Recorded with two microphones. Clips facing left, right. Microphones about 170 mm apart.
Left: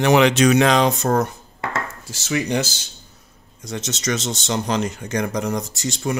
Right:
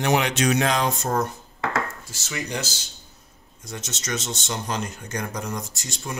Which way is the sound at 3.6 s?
85° left.